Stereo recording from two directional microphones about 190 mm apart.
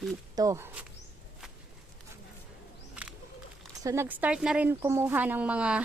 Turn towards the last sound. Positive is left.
turn(degrees=-5)  # may be behind; listen again after turning